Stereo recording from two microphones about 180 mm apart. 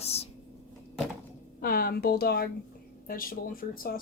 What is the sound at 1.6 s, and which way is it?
Speech, 55° left (ahead or behind).